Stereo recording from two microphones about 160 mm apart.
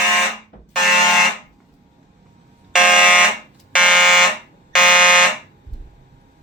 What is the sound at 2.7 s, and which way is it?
Fire alarm, 5° right (ahead or behind).